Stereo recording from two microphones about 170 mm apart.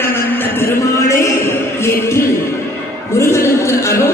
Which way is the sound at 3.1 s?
15° left (ahead or behind).